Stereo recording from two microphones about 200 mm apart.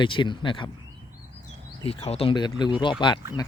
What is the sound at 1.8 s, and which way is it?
Speech, 30° left (ahead or behind).